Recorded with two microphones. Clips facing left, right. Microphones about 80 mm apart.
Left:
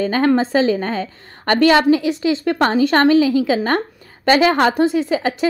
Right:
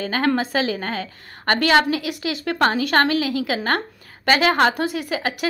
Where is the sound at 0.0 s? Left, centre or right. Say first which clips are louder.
Left 5 dB; left.